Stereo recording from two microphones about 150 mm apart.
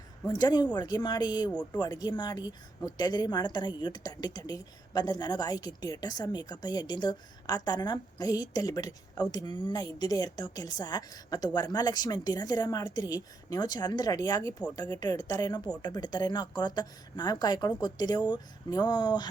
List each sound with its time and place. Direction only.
0.3 s a woman's voice: 25° left (ahead or behind)